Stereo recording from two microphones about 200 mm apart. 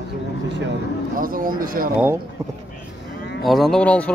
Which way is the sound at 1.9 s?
10° right (ahead or behind).